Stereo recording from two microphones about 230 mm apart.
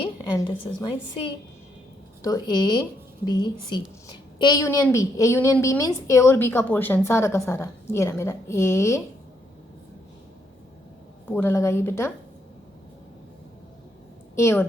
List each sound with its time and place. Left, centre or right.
0.0 s a woman's voice: left
11.3 s a woman's voice: centre
14.3 s a woman's voice: centre